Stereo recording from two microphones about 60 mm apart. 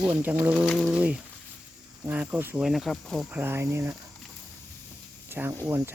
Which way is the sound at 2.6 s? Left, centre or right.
Centre.